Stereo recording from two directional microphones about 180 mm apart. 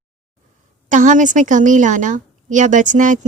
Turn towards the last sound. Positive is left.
turn(degrees=-45)  # may be behind; listen again after turning